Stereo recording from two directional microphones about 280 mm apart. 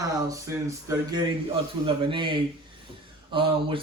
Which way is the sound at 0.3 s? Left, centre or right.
Centre.